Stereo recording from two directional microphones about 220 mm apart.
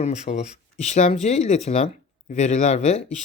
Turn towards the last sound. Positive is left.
turn(degrees=30)  # may be behind; listen again after turning